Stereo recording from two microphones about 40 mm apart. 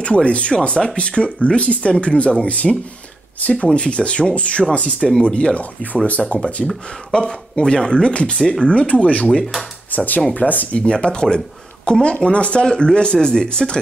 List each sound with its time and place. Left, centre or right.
0.0 s speech: left
8.4 s speech: centre
8.6 s speech: left
9.3 s speech: centre
9.8 s speech: left
10.8 s speech: left